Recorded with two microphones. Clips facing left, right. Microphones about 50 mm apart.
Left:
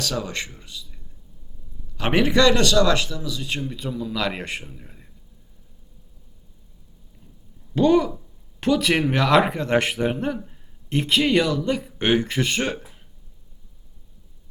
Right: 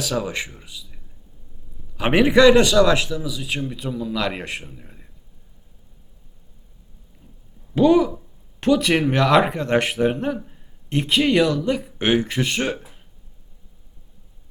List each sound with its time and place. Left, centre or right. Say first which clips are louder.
0.0 s a man's voice: right 3 dB; centre
2.0 s a man's voice: right 4 dB; centre
7.8 s a man's voice: right 2 dB; centre